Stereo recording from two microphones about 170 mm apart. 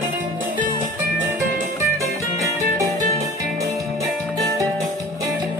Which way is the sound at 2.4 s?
20° right (ahead or behind).